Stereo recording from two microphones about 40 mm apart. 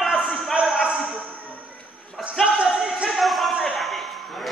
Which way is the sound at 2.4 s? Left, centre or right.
Right.